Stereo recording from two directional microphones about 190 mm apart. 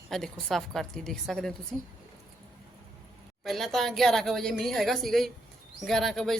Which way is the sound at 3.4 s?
Centre (ahead or behind).